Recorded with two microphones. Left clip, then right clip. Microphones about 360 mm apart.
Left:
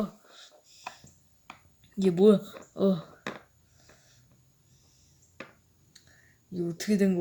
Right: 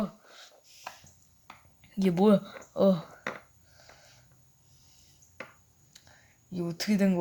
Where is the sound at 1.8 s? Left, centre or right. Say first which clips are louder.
Left 4 dB; centre.